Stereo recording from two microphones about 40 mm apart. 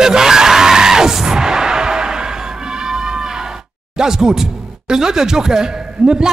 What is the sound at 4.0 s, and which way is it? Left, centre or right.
Speech, centre.